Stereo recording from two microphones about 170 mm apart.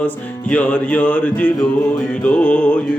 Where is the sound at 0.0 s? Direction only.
10° left (ahead or behind).